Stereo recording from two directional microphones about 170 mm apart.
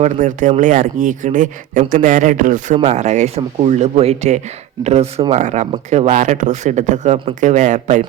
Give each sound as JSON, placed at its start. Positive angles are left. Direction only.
{"t": 0.0, "sound": "speech", "side_deg": -50}